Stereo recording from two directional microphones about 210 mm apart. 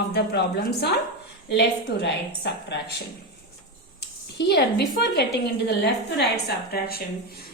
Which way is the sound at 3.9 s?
55° left (ahead or behind).